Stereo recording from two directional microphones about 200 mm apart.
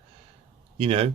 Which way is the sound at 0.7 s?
30° right (ahead or behind).